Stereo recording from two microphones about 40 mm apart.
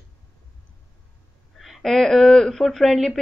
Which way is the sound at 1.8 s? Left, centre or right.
Centre.